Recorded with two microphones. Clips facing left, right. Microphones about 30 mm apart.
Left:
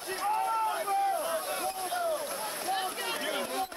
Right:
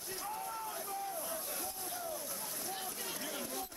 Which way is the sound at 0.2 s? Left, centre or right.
Left.